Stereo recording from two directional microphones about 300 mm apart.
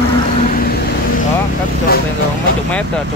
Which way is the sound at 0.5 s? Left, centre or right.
Left.